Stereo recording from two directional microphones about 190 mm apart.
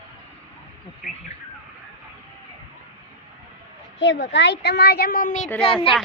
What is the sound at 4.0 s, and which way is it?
A woman's voice, 70° left (ahead or behind).